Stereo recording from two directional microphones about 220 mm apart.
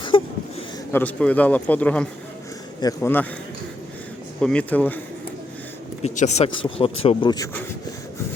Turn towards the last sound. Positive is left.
turn(degrees=20)  # may be behind; listen again after turning